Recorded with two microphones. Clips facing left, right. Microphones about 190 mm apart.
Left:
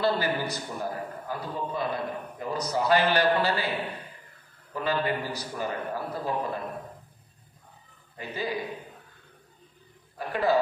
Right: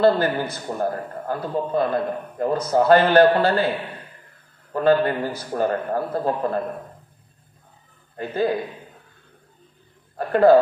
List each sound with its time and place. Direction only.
0.0 s a man's voice: 55° right (ahead or behind)
4.7 s a man's voice: 55° right (ahead or behind)
8.2 s a man's voice: 55° right (ahead or behind)
10.1 s a man's voice: 55° right (ahead or behind)